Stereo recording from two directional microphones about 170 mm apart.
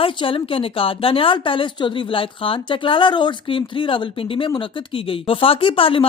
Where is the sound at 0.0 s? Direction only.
30° left (ahead or behind).